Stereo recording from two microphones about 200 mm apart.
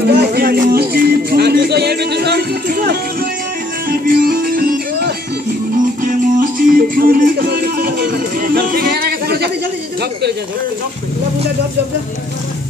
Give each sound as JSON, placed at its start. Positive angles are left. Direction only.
{"t": 0.0, "sound": "music", "side_deg": -50}